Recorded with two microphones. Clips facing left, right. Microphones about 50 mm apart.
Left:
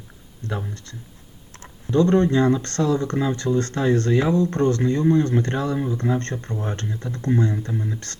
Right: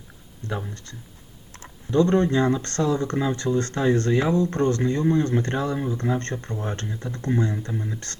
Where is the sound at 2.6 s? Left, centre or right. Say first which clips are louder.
Left 2 dB; right.